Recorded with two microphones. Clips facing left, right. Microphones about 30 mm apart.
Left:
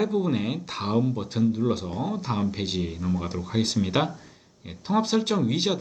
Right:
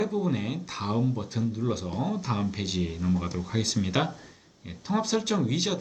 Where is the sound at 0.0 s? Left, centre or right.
Left.